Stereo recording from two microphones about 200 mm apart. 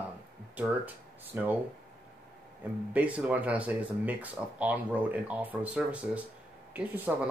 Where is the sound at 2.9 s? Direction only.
5° right (ahead or behind).